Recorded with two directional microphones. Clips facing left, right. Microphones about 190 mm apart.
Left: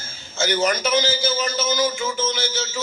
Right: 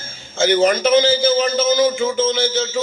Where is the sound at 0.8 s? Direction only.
50° right (ahead or behind).